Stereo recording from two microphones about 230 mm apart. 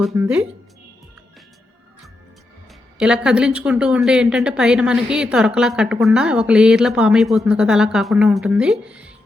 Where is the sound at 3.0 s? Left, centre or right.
Centre.